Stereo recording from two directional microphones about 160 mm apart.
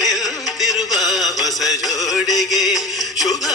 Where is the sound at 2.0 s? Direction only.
Centre (ahead or behind).